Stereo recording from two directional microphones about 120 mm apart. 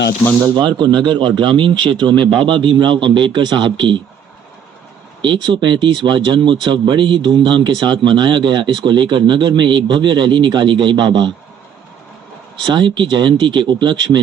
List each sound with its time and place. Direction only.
0.5 s speech: 40° right (ahead or behind)
5.2 s speech: 40° right (ahead or behind)
12.5 s speech: 40° right (ahead or behind)